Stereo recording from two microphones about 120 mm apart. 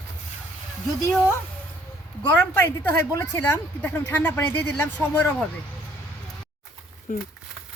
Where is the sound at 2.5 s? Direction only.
20° left (ahead or behind).